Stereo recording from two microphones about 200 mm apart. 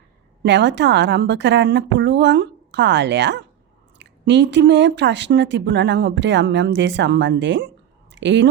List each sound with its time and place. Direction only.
0.4 s speech: 60° right (ahead or behind)